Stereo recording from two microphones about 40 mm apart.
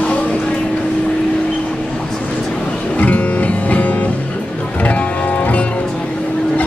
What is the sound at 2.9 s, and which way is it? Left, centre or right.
Music, left.